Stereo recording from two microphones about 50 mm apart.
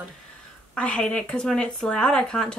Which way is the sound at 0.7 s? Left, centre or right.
Left.